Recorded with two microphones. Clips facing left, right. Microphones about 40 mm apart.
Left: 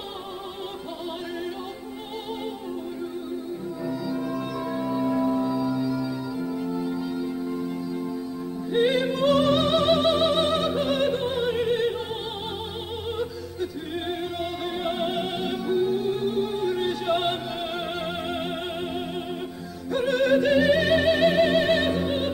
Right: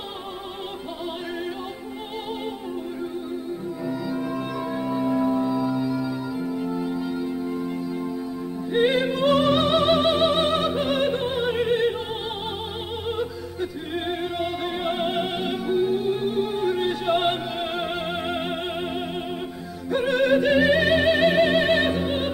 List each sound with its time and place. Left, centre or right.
3.8 s music: centre
8.7 s opera: centre
13.1 s music: right